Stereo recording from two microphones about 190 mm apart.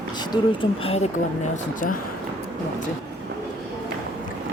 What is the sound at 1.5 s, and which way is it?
Speech, 45° left (ahead or behind).